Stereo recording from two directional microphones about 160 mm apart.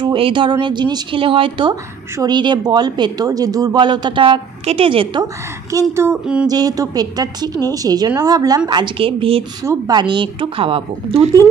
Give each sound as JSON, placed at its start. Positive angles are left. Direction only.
{"t": 0.0, "sound": "speech", "side_deg": -30}
{"t": 5.7, "sound": "speech", "side_deg": -20}
{"t": 9.6, "sound": "a woman's voice", "side_deg": -25}